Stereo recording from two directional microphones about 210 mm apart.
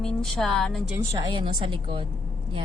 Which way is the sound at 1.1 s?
20° right (ahead or behind).